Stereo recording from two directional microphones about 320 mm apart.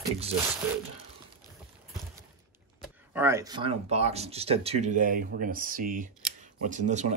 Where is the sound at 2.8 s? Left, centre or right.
Centre.